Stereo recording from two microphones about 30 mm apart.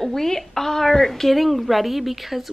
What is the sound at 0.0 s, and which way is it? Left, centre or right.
A woman's voice, centre.